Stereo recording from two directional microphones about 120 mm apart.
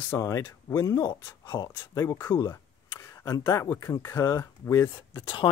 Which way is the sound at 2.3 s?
25° left (ahead or behind).